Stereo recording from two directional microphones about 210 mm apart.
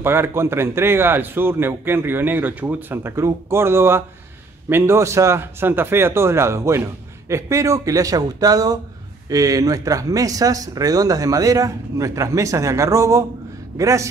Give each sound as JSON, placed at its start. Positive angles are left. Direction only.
{"t": 0.0, "sound": "a man's voice", "side_deg": -10}